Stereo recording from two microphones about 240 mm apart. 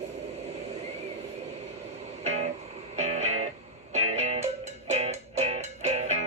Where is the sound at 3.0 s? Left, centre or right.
Right.